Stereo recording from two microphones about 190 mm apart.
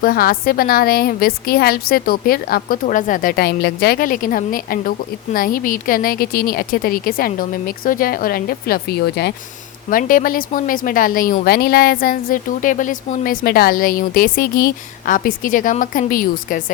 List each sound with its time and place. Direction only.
0.0 s a woman's voice: 50° left (ahead or behind)
9.9 s a woman's voice: 45° left (ahead or behind)